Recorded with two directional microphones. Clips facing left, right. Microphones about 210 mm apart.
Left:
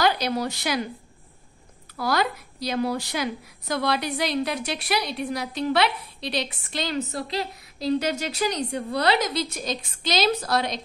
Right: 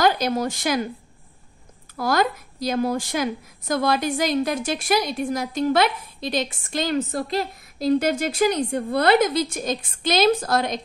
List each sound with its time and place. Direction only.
0.0 s a woman's voice: 50° right (ahead or behind)
2.0 s a woman's voice: 50° right (ahead or behind)